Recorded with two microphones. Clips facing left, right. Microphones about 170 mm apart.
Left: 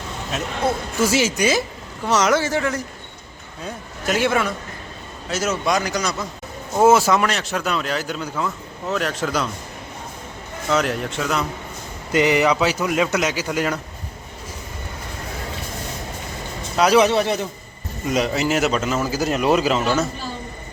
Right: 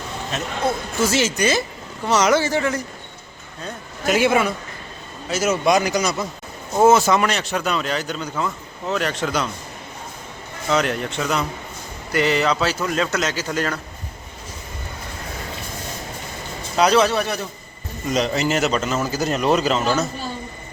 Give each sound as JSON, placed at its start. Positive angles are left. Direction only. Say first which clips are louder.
{"t": 0.7, "sound": "a man's voice", "louder": "left 1 dB", "side_deg": 10}
{"t": 4.0, "sound": "a man's voice", "louder": "right 2 dB", "side_deg": -5}
{"t": 6.7, "sound": "speech", "louder": "even", "side_deg": 5}
{"t": 10.7, "sound": "speech", "louder": "even", "side_deg": 0}
{"t": 12.1, "sound": "a man's voice", "louder": "left 2 dB", "side_deg": 15}
{"t": 16.7, "sound": "a man's voice", "louder": "left 1 dB", "side_deg": 5}
{"t": 17.0, "sound": "a man's voice", "louder": "left 2 dB", "side_deg": 20}
{"t": 18.1, "sound": "speech", "louder": "even", "side_deg": 5}